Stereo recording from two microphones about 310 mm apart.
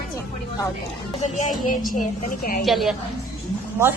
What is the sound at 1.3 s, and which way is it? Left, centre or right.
A man's voice, left.